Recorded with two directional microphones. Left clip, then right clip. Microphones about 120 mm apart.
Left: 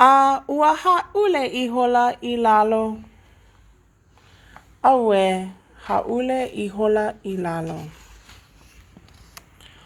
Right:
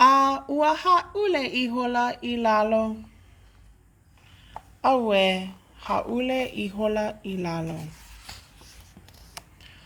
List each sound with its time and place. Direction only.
0.0 s speech: 35° left (ahead or behind)
4.8 s speech: 35° left (ahead or behind)